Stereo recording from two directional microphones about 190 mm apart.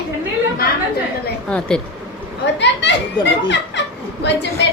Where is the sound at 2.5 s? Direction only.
65° left (ahead or behind).